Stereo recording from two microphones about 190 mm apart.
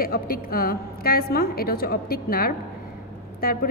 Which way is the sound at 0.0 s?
50° left (ahead or behind).